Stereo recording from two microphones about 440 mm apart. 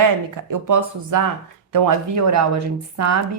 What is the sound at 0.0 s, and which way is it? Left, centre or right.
Speech, right.